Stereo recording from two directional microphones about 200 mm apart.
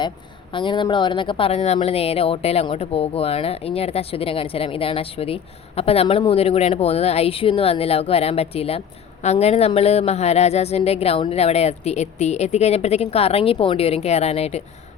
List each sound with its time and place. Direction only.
0.5 s a woman's voice: 25° left (ahead or behind)